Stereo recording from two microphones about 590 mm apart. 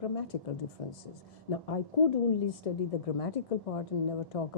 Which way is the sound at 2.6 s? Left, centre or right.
Left.